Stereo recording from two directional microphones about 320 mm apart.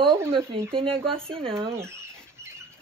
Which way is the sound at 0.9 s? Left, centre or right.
Centre.